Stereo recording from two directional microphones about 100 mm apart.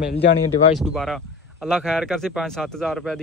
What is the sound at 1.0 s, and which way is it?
Speech, 5° left (ahead or behind).